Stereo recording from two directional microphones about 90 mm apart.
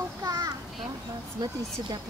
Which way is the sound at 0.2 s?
40° right (ahead or behind).